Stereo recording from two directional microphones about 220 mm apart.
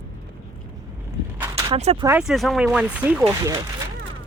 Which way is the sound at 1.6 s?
25° right (ahead or behind).